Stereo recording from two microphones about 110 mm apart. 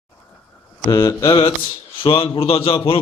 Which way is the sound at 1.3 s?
50° left (ahead or behind).